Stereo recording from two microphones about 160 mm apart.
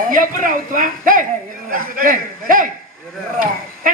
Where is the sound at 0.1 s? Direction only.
55° right (ahead or behind).